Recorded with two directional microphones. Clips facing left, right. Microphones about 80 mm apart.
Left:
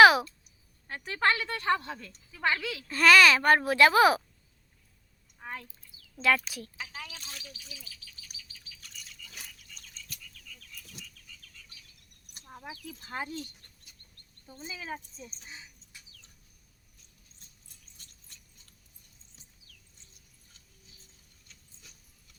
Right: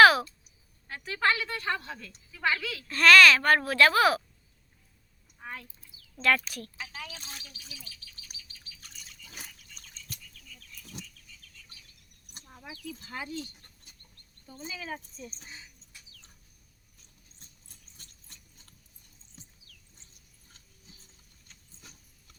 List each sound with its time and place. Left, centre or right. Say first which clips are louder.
0.0 s a sound: even; centre
0.9 s a woman's voice: even; left
2.6 s a child's voice: even; centre
6.2 s speech: even; centre
7.2 s speech: even; right
8.8 s bird: left 3 dB; right
11.0 s frog: right 6 dB; right
12.5 s sheep: right 1 dB; left
13.1 s speech: left 2 dB; left
17.9 s a sound: right 2 dB; right
21.4 s a sound: right 4 dB; right